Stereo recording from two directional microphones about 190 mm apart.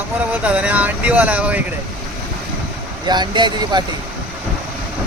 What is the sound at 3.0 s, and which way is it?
Speech, 20° right (ahead or behind).